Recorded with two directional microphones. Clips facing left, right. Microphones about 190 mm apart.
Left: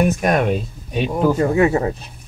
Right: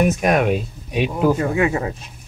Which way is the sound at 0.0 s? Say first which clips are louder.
Even; 5° right (ahead or behind).